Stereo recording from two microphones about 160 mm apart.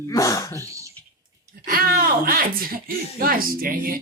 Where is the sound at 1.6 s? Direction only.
65° right (ahead or behind).